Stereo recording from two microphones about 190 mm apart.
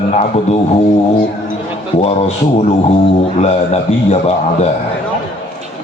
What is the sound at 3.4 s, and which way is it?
Speech, 35° left (ahead or behind).